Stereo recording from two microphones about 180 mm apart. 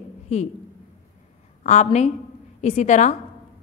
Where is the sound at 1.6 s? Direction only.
40° left (ahead or behind).